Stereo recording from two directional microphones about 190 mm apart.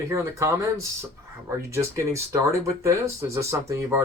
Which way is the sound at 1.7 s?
15° right (ahead or behind).